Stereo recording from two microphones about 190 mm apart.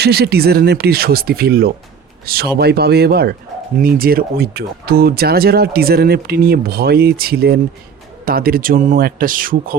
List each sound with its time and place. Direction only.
0.0 s speech: 55° right (ahead or behind)